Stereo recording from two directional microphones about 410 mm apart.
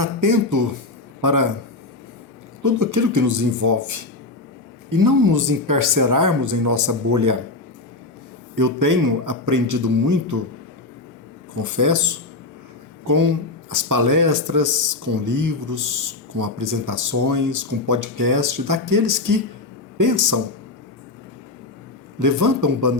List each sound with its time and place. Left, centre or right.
0.0 s speech: right
2.6 s speech: right
8.5 s speech: right
11.8 s speech: right
22.2 s speech: right